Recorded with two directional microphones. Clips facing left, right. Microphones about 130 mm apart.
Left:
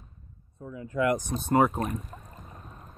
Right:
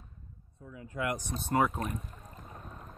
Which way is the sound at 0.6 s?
45° left (ahead or behind).